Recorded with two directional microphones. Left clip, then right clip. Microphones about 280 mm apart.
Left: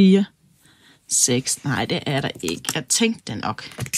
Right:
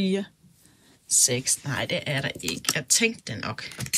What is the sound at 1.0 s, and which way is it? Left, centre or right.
Speech, left.